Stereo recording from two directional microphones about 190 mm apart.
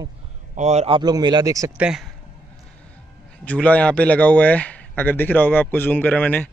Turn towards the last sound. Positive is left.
turn(degrees=10)  # may be behind; listen again after turning